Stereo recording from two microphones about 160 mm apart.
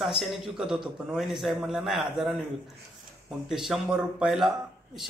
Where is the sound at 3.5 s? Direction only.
5° right (ahead or behind).